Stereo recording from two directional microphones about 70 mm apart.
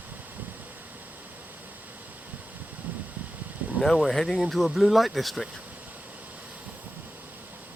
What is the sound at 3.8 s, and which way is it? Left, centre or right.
Speech, centre.